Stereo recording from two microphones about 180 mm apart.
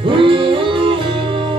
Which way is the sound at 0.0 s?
30° right (ahead or behind).